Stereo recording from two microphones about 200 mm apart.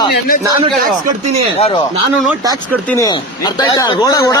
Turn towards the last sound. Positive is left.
turn(degrees=15)  # may be behind; listen again after turning